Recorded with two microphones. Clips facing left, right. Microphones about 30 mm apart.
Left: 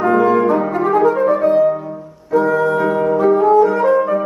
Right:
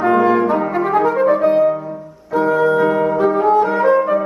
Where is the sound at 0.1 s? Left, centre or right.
Centre.